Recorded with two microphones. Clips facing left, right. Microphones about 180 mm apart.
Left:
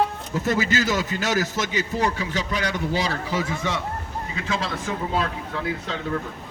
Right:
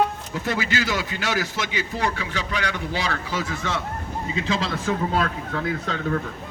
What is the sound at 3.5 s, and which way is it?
Speech, 20° left (ahead or behind).